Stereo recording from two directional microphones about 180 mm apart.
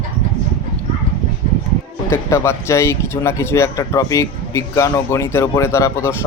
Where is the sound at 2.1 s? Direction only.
15° left (ahead or behind).